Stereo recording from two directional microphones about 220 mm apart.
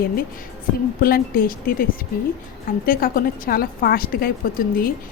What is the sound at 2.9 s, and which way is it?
A woman's voice, 40° left (ahead or behind).